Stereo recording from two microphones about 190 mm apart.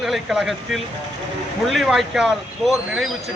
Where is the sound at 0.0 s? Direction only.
Centre (ahead or behind).